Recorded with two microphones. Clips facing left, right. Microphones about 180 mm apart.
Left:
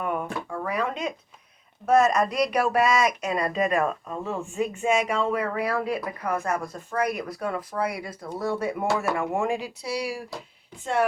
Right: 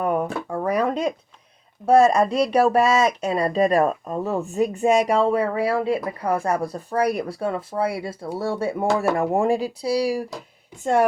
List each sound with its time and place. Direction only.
0.0 s speech: 40° right (ahead or behind)